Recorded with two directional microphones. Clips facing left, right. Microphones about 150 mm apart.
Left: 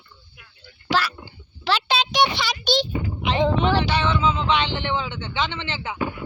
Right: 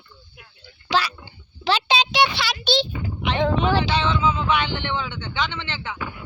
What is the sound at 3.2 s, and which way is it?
Speech, centre (ahead or behind).